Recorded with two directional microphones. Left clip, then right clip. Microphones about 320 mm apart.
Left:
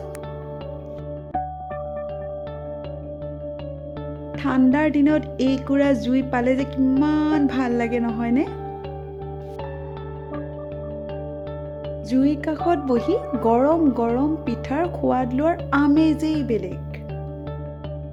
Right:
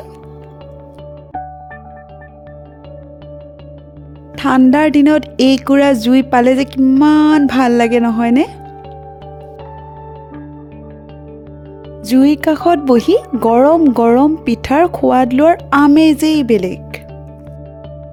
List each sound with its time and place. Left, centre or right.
4.4 s speech: right
12.0 s speech: right